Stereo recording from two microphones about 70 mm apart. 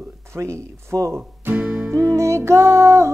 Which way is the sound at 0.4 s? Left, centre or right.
Right.